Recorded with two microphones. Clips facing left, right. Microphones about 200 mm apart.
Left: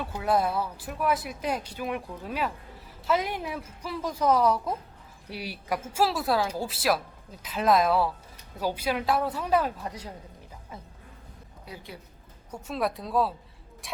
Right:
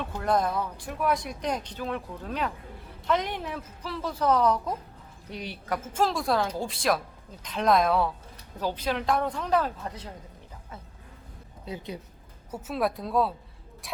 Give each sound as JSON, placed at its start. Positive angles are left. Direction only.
{"t": 0.0, "sound": "a woman's voice", "side_deg": 5}
{"t": 11.6, "sound": "a woman's voice", "side_deg": -20}
{"t": 12.5, "sound": "a woman's voice", "side_deg": -5}